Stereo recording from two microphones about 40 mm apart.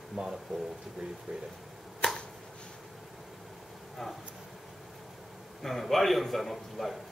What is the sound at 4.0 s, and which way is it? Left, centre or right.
Speech, centre.